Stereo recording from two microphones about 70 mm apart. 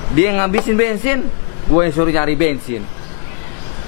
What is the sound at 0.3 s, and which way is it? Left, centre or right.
Speech, centre.